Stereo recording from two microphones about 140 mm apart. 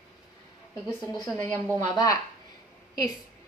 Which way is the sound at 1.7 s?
25° left (ahead or behind).